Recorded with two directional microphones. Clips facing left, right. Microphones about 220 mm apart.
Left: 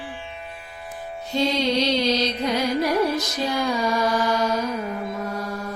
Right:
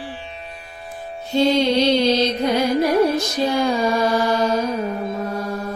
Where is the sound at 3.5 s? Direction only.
30° right (ahead or behind).